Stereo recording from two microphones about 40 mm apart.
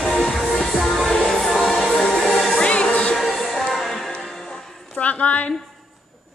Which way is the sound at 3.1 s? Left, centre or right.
Centre.